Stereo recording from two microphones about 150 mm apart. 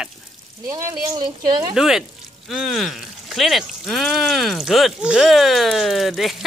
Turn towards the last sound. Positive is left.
turn(degrees=0)  # may be behind; listen again after turning